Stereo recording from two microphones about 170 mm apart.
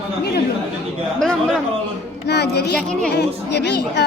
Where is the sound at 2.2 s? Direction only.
75° left (ahead or behind).